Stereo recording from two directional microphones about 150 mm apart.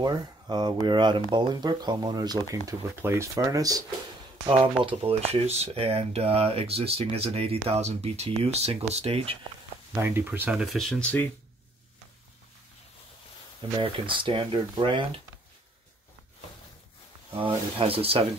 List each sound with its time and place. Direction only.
0.0 s speech: 30° right (ahead or behind)
4.8 s speech: 40° right (ahead or behind)
9.9 s speech: 15° right (ahead or behind)
10.7 s speech: centre (ahead or behind)
13.7 s speech: 35° right (ahead or behind)
17.4 s speech: 35° right (ahead or behind)